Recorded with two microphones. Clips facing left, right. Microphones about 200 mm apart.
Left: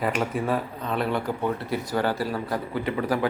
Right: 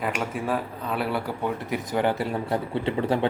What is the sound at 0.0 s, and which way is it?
Speech, centre (ahead or behind).